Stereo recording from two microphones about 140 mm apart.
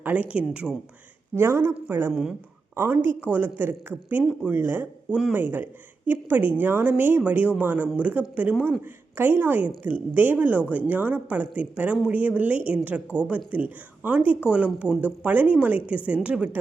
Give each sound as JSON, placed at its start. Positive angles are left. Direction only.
{"t": 0.0, "sound": "speech", "side_deg": -10}
{"t": 1.4, "sound": "speech", "side_deg": -20}